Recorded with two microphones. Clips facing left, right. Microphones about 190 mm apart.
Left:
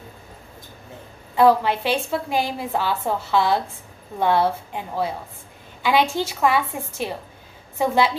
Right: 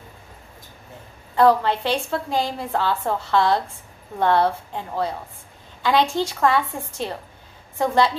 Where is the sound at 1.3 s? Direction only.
10° left (ahead or behind).